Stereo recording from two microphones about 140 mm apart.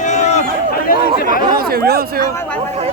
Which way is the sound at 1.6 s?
90° right.